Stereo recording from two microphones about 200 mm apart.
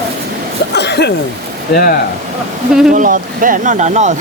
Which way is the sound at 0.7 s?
55° left (ahead or behind).